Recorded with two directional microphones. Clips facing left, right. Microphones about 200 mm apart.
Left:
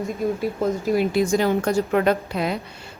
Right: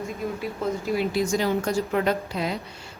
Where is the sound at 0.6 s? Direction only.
50° left (ahead or behind).